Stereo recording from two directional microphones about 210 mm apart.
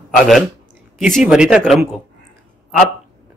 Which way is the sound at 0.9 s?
Centre (ahead or behind).